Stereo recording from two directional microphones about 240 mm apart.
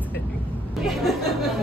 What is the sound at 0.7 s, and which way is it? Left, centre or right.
Speech, centre.